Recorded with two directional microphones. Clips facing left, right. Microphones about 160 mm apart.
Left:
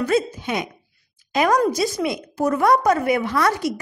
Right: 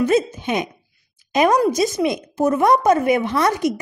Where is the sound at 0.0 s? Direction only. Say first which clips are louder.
Right 3 dB; 20° right (ahead or behind).